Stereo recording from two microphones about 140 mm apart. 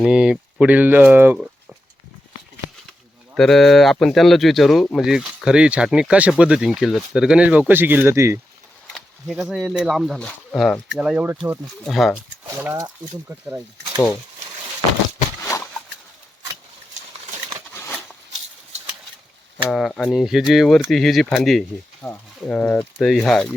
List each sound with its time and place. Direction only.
0.0 s speech: 5° right (ahead or behind)
3.3 s speech: 5° left (ahead or behind); by 8.4 s 20° right (ahead or behind)
9.0 s a sound: 5° left (ahead or behind)
9.4 s speech: centre (ahead or behind)
11.9 s speech: centre (ahead or behind)
12.6 s speech: 20° right (ahead or behind)
15.4 s a sound: 15° left (ahead or behind)
17.7 s a sound: 15° left (ahead or behind)
19.6 s speech: centre (ahead or behind)